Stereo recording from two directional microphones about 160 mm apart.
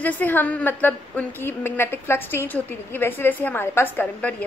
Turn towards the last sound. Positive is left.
turn(degrees=10)  # may be behind; listen again after turning